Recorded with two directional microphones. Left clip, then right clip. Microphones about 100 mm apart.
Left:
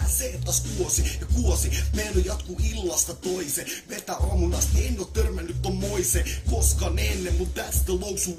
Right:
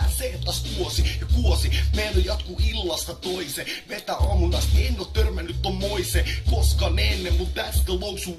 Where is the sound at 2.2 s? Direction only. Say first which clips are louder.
Right 3 dB; 30° left (ahead or behind).